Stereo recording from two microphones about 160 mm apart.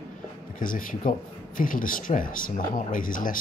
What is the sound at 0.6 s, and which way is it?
Speech, 60° left (ahead or behind).